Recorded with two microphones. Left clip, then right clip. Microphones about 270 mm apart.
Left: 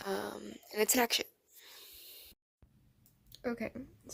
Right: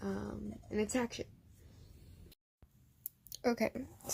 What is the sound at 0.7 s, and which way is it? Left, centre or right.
Speech, left.